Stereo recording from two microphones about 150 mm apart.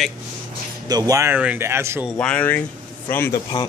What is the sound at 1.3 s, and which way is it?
Speech, 10° right (ahead or behind).